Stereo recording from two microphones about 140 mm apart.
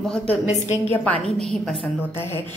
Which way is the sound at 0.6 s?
55° left (ahead or behind).